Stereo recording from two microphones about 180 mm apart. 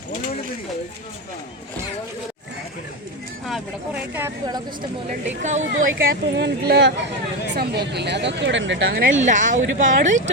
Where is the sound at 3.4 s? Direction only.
Centre (ahead or behind).